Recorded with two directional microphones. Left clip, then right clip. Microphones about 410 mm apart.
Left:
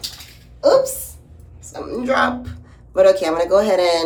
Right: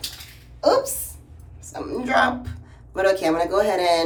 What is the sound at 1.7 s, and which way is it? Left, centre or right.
A man's voice, centre.